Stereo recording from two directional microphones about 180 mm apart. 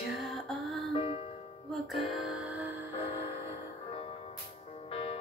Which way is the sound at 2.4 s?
10° right (ahead or behind).